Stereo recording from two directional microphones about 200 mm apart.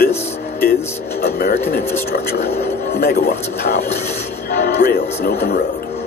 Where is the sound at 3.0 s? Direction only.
50° left (ahead or behind).